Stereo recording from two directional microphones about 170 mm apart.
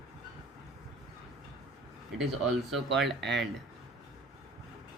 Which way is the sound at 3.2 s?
90° right.